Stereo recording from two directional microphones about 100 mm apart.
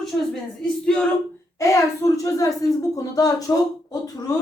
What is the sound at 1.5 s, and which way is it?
Speech, 30° left (ahead or behind).